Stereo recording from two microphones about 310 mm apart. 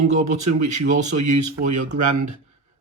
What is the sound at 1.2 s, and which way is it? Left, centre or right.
Speech, right.